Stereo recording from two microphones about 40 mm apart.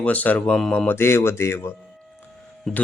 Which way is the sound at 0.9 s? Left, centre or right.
Left.